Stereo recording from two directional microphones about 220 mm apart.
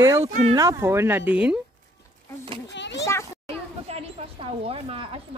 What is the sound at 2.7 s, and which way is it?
Children playing, 55° left (ahead or behind).